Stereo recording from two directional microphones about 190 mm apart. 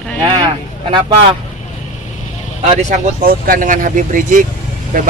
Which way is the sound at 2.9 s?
45° right (ahead or behind).